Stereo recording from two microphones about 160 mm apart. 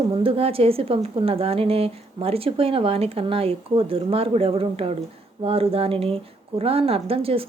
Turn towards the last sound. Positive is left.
turn(degrees=-35)  # may be behind; listen again after turning